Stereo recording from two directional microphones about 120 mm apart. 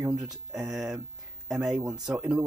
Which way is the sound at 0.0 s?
10° right (ahead or behind).